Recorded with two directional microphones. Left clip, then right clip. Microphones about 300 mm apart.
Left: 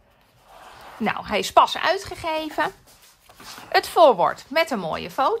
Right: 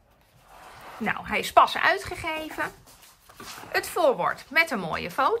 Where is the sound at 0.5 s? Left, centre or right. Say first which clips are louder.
Left 3 dB; centre.